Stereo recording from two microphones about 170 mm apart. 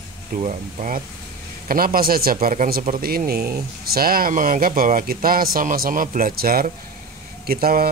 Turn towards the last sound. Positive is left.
turn(degrees=-60)  # may be behind; listen again after turning